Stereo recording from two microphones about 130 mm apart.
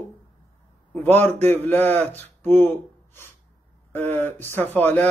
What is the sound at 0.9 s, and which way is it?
A man's voice, 15° left (ahead or behind).